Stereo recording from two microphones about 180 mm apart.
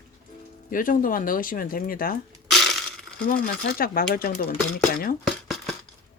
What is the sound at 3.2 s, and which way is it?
A woman's voice, 55° left (ahead or behind).